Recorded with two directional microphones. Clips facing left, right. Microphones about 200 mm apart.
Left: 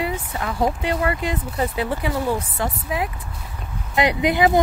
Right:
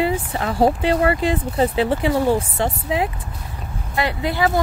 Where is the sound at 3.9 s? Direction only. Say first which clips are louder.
Left 3 dB; 20° left (ahead or behind).